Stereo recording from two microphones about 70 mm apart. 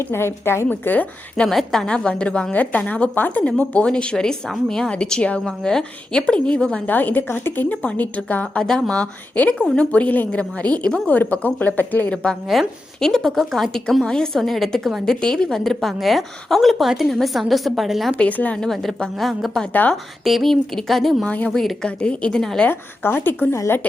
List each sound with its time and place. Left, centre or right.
0.0 s speech: left
0.7 s a woman's voice: left
1.4 s a woman's voice: centre
6.8 s a woman's voice: left
8.6 s a woman's voice: centre; by 12.1 s left
12.1 s a woman's voice: centre
18.2 s a woman's voice: left
18.6 s a woman's voice: centre
21.2 s a woman's voice: centre
21.5 s a woman's voice: centre
21.8 s a woman's voice: centre
22.7 s speech: left